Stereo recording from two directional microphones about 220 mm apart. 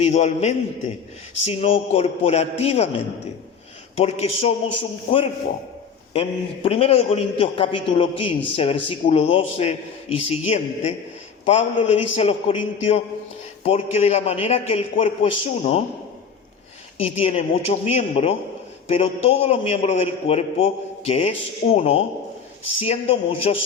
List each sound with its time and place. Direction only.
0.0 s a man's voice: 30° left (ahead or behind)
3.9 s a man's voice: 30° left (ahead or behind)
17.0 s a man's voice: 25° left (ahead or behind)